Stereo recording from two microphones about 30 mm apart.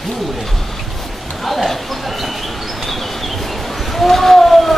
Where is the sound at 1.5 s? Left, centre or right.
Centre.